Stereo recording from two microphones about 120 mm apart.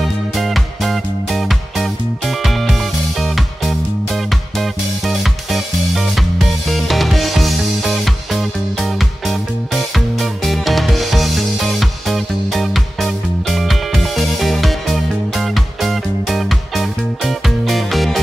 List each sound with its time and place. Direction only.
0.4 s music: centre (ahead or behind)